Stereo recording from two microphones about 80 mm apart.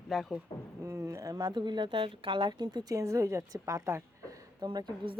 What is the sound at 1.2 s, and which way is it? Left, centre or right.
Speech, right.